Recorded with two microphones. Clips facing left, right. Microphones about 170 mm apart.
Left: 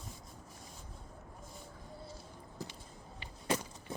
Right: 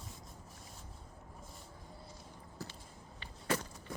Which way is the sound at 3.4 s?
15° left (ahead or behind).